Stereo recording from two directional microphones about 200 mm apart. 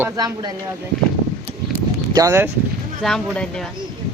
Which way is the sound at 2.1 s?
15° right (ahead or behind).